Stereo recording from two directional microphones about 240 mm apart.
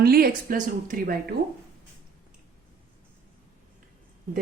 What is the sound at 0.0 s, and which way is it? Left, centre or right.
A woman's voice, right.